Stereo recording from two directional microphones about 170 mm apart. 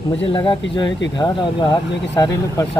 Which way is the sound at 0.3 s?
30° left (ahead or behind).